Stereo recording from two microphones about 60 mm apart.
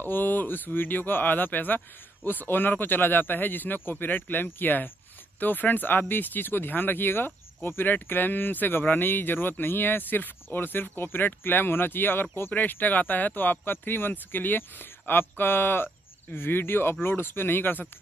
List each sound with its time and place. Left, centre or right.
0.0 s speech: left